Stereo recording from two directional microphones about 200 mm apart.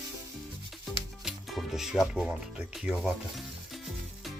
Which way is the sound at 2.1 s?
5° right (ahead or behind).